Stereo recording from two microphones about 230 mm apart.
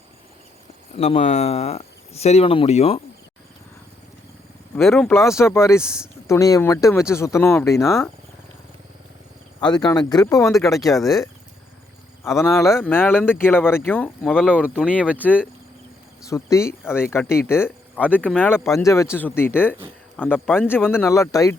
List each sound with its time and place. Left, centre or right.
0.9 s speech: left
4.8 s speech: centre
9.7 s speech: centre
10.9 s speech: centre
12.7 s speech: centre
16.2 s speech: centre
18.0 s speech: centre
18.3 s speech: centre